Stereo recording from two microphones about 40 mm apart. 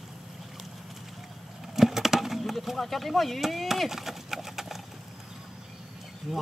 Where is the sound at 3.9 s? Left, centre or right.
Centre.